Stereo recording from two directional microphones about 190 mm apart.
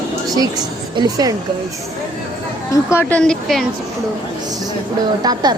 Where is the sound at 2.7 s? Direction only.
15° left (ahead or behind).